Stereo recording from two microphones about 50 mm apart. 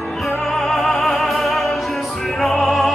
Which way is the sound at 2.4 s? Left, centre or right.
Centre.